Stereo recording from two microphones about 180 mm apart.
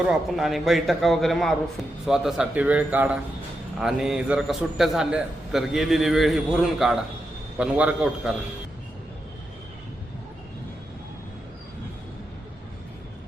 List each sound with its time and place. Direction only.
0.0 s a man's voice: centre (ahead or behind)